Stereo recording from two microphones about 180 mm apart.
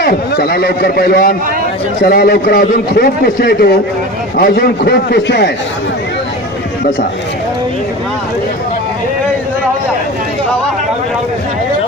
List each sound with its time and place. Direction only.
0.0 s a man's voice: 60° left (ahead or behind)